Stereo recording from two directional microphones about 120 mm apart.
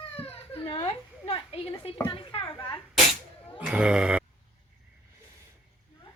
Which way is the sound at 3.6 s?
10° right (ahead or behind).